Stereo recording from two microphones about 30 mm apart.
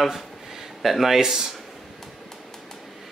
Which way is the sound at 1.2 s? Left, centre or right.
Right.